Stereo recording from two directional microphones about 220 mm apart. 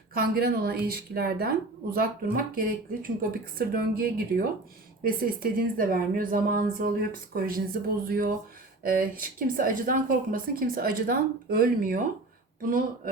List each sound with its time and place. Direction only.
0.1 s a woman's voice: 45° right (ahead or behind)